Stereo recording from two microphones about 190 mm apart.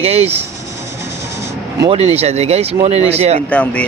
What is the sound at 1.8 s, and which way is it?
Speech, 30° right (ahead or behind).